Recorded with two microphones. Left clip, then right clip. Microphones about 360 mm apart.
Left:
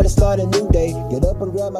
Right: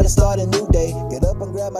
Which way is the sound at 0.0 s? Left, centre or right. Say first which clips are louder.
Left 1 dB; right.